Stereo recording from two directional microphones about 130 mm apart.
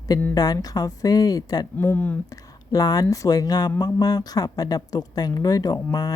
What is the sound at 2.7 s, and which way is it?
Speech, 30° left (ahead or behind).